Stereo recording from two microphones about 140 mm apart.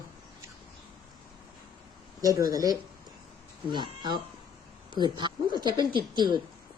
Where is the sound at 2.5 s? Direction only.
25° right (ahead or behind).